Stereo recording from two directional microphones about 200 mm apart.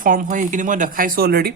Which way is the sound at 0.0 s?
45° right (ahead or behind).